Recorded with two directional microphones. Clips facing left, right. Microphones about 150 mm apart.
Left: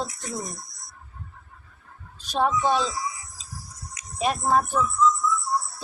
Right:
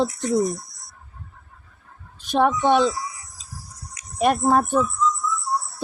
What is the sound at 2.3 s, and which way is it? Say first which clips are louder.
Speech: right 5 dB; 55° right (ahead or behind).